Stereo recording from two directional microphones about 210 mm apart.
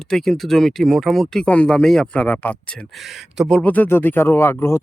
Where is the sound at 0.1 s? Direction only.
Centre (ahead or behind).